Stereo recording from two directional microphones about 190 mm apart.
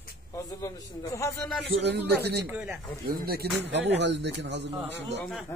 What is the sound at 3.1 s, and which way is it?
Speech, 55° right (ahead or behind).